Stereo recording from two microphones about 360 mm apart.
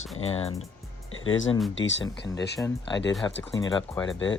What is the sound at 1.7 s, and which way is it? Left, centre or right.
Speech, left.